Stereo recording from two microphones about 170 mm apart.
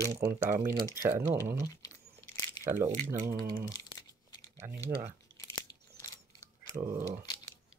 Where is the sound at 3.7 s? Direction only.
20° left (ahead or behind).